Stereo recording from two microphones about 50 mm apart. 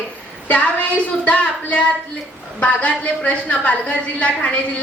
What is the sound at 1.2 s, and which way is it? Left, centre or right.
A woman's voice, left.